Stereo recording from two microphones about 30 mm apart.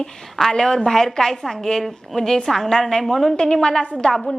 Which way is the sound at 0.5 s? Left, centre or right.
Centre.